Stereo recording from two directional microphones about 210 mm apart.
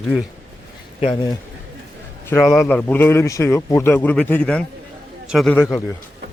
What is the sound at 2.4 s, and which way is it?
A man's voice, centre (ahead or behind).